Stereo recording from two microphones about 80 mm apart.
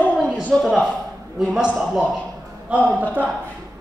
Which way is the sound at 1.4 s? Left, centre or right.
Centre.